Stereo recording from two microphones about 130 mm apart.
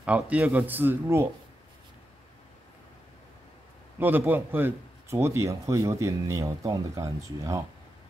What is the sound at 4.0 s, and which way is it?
A man's voice, 15° right (ahead or behind).